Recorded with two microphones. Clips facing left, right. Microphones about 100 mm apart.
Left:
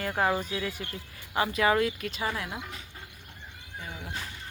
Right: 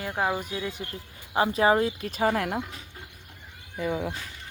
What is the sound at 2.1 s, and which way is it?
Speech, 50° right (ahead or behind).